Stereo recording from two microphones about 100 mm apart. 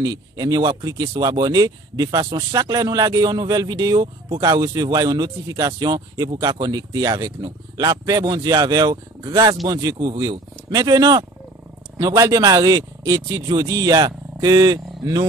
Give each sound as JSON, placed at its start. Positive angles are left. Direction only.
{"t": 0.0, "sound": "speech", "side_deg": -40}